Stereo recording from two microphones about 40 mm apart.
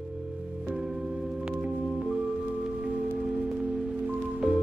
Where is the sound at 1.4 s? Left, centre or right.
Right.